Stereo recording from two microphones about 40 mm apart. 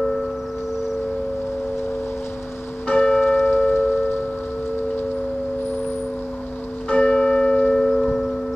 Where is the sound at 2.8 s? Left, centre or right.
Left.